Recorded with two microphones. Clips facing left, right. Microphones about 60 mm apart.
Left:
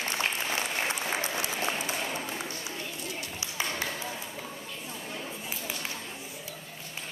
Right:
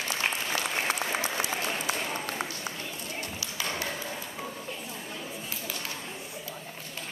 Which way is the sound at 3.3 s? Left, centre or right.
Left.